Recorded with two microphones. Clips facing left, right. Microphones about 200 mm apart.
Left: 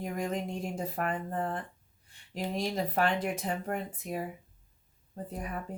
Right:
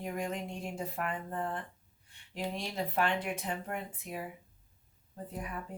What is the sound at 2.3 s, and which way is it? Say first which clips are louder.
Speech: left 5 dB; 40° left (ahead or behind).